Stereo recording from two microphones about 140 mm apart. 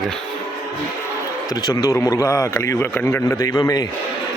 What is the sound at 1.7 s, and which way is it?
A man's voice, 20° left (ahead or behind).